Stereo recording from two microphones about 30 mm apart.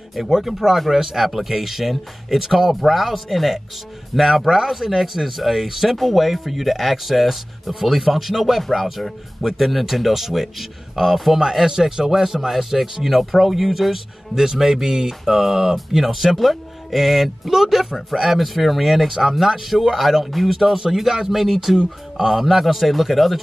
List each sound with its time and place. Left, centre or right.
0.4 s speech: centre
14.3 s speech: centre
20.2 s speech: centre
21.5 s speech: centre
22.1 s speech: centre